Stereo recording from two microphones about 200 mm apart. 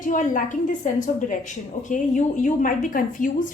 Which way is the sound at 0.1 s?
40° left (ahead or behind).